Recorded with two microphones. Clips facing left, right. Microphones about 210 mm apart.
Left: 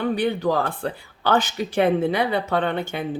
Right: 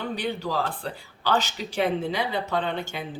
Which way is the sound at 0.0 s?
55° left (ahead or behind).